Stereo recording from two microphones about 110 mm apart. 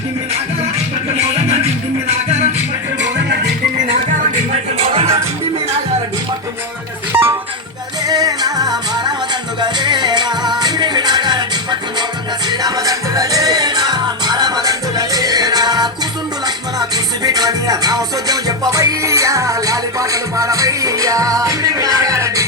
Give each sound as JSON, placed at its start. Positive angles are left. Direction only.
{"t": 4.8, "sound": "music", "side_deg": -65}
{"t": 7.1, "sound": "music", "side_deg": -20}
{"t": 8.0, "sound": "music", "side_deg": -35}
{"t": 17.2, "sound": "music", "side_deg": -35}